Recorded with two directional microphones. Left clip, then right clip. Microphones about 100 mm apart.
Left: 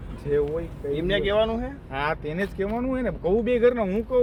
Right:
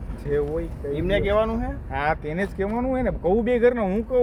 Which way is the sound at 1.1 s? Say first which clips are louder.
Right 1 dB; 20° right (ahead or behind).